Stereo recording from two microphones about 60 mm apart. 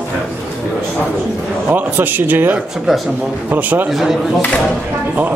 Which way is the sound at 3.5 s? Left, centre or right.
Right.